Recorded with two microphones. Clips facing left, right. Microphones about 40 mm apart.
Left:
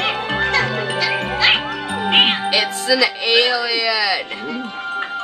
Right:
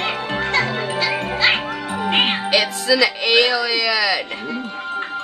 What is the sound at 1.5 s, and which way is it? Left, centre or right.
Cat, left.